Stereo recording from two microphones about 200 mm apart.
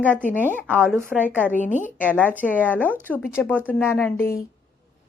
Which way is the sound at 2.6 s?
10° left (ahead or behind).